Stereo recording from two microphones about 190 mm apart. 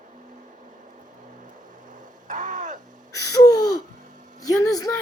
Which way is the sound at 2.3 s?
40° right (ahead or behind).